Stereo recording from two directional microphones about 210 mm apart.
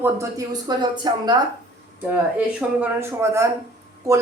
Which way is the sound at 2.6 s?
10° right (ahead or behind).